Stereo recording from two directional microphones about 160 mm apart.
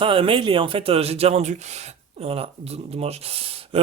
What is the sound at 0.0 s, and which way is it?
Speech, 35° right (ahead or behind).